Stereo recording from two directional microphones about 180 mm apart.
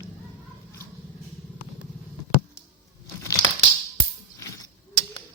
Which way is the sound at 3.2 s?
20° left (ahead or behind).